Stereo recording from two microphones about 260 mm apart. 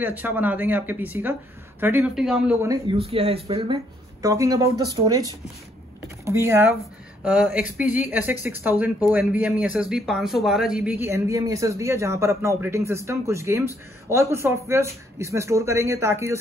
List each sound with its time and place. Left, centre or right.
0.0 s speech: centre
6.2 s speech: centre